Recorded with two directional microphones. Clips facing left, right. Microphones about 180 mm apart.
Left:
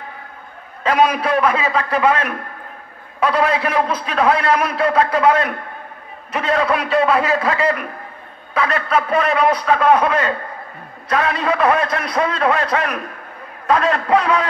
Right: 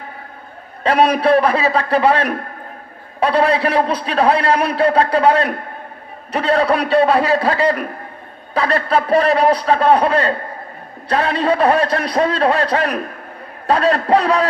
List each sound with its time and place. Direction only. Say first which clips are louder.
0.8 s a man's voice: right 3 dB; 35° right (ahead or behind)